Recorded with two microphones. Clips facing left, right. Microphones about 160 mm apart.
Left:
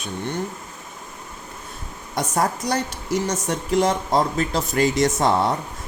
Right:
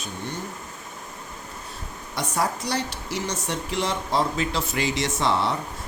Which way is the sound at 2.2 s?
45° left (ahead or behind).